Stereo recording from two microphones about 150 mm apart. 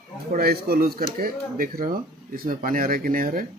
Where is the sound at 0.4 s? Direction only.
85° right; by 3.4 s 65° right (ahead or behind).